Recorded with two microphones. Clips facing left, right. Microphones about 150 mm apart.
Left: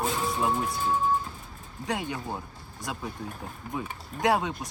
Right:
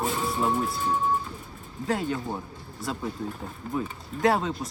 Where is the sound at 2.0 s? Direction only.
15° left (ahead or behind).